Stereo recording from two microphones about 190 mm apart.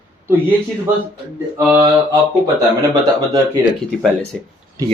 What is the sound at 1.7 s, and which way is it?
Speech, 20° right (ahead or behind).